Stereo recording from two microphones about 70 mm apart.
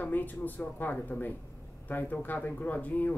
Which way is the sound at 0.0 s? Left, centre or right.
Left.